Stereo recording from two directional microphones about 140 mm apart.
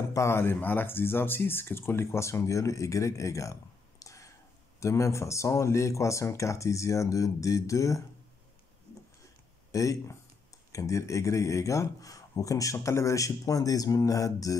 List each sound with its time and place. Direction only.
0.1 s speech: 20° left (ahead or behind)
4.0 s whispering: 20° left (ahead or behind)
4.7 s speech: 20° left (ahead or behind)
9.7 s speech: 20° left (ahead or behind)